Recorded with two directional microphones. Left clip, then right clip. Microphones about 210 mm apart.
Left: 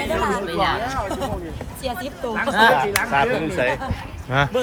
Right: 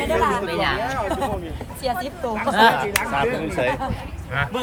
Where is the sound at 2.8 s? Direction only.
40° left (ahead or behind).